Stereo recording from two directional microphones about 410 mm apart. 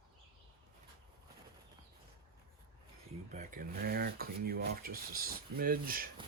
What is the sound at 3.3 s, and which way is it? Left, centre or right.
Speech, centre.